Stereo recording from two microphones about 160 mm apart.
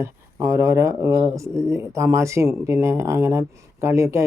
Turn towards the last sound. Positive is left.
turn(degrees=-20)  # may be behind; listen again after turning